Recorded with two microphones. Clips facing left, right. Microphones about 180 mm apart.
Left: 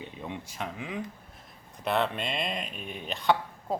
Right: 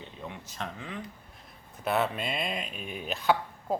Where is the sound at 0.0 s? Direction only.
15° left (ahead or behind).